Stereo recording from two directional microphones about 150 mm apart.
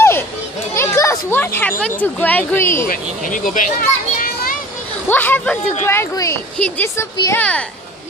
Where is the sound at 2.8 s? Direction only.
60° left (ahead or behind).